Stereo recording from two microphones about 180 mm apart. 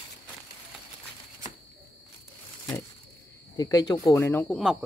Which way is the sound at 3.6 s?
20° left (ahead or behind).